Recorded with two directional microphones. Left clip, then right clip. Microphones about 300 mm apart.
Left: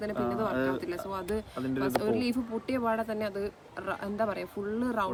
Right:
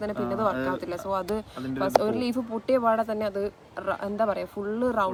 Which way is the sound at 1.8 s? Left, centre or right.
Centre.